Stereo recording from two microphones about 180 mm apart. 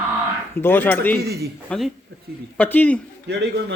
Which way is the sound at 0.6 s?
10° left (ahead or behind).